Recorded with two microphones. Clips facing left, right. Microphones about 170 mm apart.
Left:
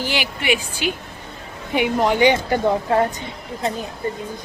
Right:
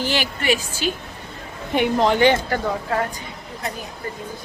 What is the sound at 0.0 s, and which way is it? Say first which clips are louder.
A woman's voice: right 1 dB; 10° left (ahead or behind).